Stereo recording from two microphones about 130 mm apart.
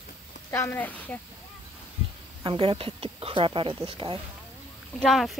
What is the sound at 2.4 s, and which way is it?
Speech, 40° right (ahead or behind).